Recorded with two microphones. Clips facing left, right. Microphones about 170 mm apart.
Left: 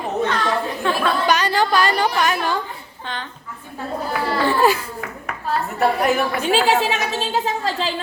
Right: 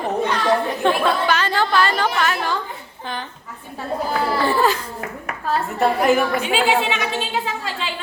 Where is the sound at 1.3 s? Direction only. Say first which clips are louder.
Left 2 dB; 15° left (ahead or behind).